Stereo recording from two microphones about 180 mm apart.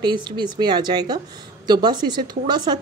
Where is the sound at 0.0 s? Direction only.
25° right (ahead or behind).